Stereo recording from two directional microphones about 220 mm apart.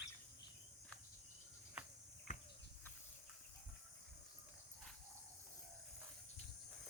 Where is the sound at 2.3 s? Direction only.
30° left (ahead or behind).